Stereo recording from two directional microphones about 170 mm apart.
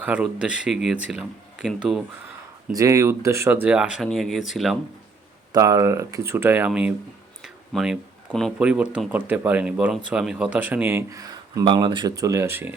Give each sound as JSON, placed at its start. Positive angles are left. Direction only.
{"t": 0.0, "sound": "speech", "side_deg": -5}
{"t": 2.7, "sound": "speech", "side_deg": -20}
{"t": 5.5, "sound": "speech", "side_deg": -20}